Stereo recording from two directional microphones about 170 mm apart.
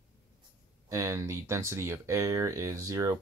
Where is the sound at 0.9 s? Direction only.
15° right (ahead or behind).